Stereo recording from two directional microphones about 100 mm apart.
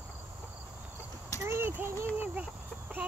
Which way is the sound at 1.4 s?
25° right (ahead or behind).